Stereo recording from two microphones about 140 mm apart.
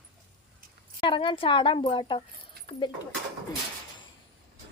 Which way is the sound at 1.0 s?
35° left (ahead or behind).